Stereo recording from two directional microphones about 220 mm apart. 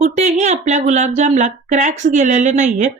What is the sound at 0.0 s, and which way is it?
Speech, 30° right (ahead or behind).